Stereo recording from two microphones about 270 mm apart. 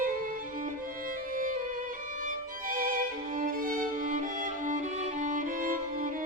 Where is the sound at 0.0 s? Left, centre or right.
Right.